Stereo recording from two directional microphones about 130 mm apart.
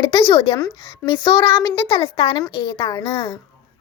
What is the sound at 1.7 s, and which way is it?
A woman's voice, 40° left (ahead or behind).